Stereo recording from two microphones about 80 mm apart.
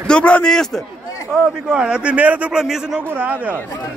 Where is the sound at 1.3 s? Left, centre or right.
Centre.